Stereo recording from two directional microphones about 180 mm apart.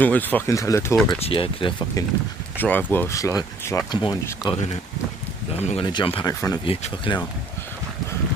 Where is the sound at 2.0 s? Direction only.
20° left (ahead or behind).